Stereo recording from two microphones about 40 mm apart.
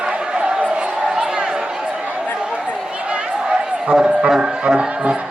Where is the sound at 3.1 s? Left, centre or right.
Right.